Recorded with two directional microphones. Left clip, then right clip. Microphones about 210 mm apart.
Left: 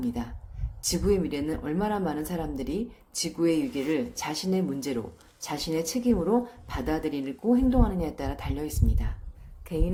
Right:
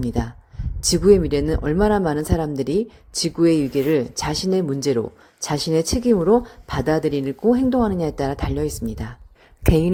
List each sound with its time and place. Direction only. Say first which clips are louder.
0.0 s speech: right 7 dB; 35° right (ahead or behind)